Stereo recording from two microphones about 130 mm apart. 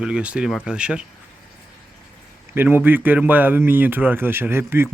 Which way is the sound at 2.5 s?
15° right (ahead or behind).